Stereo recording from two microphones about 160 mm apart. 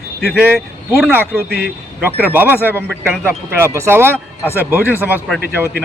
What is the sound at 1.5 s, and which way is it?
Speech, 80° right.